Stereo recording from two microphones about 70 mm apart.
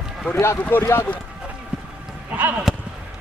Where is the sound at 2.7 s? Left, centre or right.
Centre.